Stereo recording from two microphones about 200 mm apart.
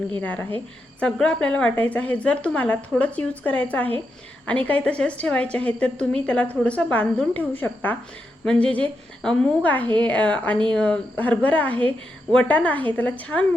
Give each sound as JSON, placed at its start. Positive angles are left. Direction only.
{"t": 0.2, "sound": "a woman's voice", "side_deg": 5}